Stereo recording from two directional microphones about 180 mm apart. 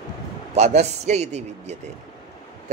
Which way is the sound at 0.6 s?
40° right (ahead or behind).